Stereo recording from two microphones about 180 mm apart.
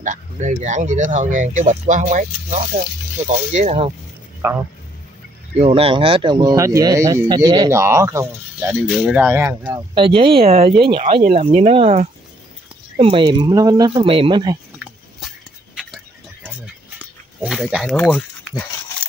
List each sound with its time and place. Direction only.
0.0 s speech: 45° right (ahead or behind)
4.4 s speech: 15° right (ahead or behind)
5.6 s speech: 30° right (ahead or behind); by 9.8 s 10° right (ahead or behind)
9.9 s speech: 30° right (ahead or behind)
15.1 s a sound: centre (ahead or behind)
17.4 s speech: 5° right (ahead or behind)